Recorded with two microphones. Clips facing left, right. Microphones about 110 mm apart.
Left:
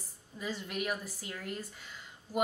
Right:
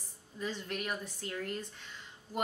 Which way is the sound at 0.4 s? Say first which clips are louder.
Left 1 dB; 10° left (ahead or behind).